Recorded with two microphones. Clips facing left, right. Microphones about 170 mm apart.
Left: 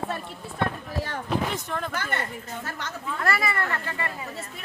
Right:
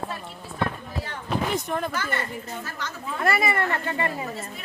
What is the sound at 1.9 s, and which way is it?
Speech, 55° left (ahead or behind).